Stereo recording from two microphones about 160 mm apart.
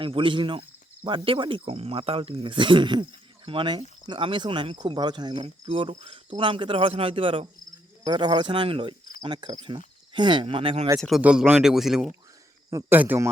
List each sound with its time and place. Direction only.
0.0 s speech: 30° right (ahead or behind)
11.2 s speech: 10° right (ahead or behind)